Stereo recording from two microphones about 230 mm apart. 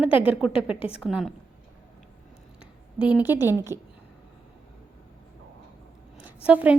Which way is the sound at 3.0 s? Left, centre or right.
Centre.